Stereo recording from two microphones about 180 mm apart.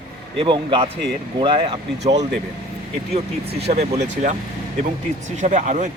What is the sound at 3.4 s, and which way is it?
Speech, 60° right (ahead or behind).